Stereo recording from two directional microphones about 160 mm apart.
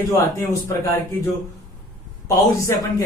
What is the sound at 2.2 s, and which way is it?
Speech, 20° left (ahead or behind).